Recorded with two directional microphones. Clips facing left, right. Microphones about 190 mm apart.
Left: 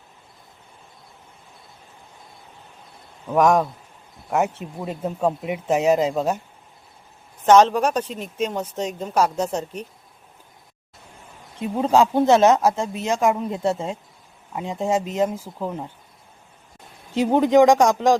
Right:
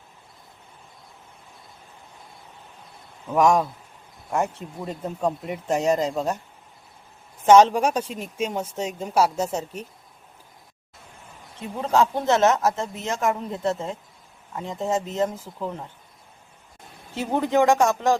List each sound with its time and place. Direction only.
3.3 s speech: centre (ahead or behind)
7.4 s speech: 10° right (ahead or behind)
11.6 s speech: 15° left (ahead or behind)
17.2 s speech: 15° left (ahead or behind)